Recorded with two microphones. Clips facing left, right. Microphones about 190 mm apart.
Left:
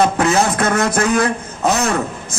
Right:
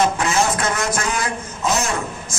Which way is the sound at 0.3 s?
60° left (ahead or behind).